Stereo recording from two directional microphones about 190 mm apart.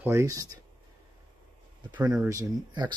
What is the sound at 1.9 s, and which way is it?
Speech, 20° right (ahead or behind).